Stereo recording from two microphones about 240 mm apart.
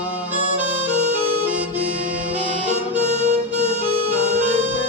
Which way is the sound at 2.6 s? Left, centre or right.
Right.